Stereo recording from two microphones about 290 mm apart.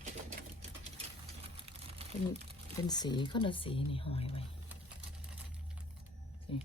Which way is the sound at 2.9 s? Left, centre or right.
Centre.